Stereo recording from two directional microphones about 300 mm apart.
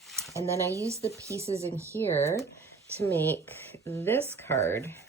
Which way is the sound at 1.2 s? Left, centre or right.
Centre.